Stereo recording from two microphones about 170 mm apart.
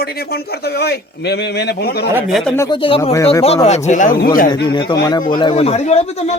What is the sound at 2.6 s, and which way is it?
Speech, 25° left (ahead or behind).